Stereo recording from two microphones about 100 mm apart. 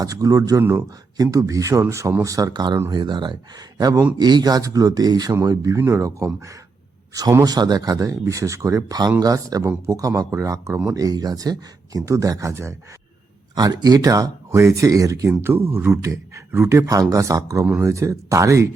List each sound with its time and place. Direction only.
0.0 s speech: 35° right (ahead or behind)
3.8 s speech: 40° right (ahead or behind)
13.6 s speech: 40° right (ahead or behind)